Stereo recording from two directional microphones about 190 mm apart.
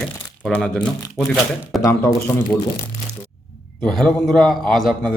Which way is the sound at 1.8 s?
15° left (ahead or behind).